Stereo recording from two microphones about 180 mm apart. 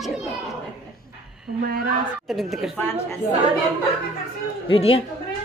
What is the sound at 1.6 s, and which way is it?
Speech, 55° right (ahead or behind).